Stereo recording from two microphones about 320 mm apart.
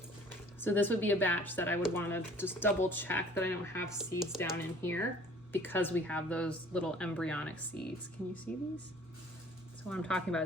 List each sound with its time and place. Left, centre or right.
0.3 s speech: centre
9.9 s speech: centre